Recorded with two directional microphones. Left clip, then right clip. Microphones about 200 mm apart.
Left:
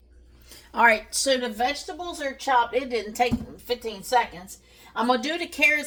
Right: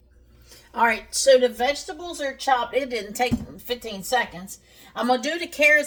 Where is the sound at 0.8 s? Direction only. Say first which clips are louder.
Left 2 dB; 35° left (ahead or behind).